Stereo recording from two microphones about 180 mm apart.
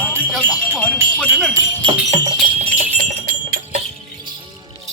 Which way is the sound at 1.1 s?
Centre (ahead or behind).